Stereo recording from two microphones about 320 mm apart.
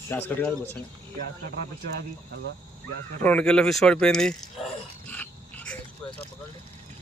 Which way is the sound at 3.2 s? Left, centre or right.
Centre.